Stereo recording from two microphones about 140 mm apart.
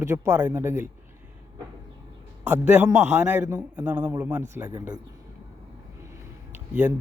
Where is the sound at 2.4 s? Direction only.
15° right (ahead or behind).